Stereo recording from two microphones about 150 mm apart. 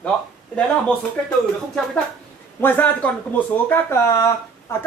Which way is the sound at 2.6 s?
15° left (ahead or behind).